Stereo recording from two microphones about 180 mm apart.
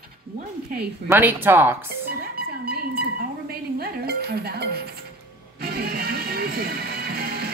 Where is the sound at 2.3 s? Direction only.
60° right (ahead or behind).